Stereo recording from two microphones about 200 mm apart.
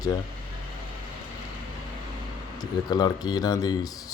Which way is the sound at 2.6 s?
20° left (ahead or behind).